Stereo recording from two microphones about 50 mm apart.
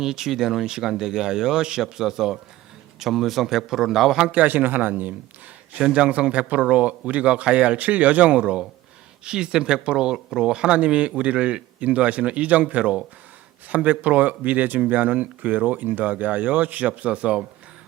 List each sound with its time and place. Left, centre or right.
0.0 s speech: centre
4.3 s speech: right
5.8 s speech: right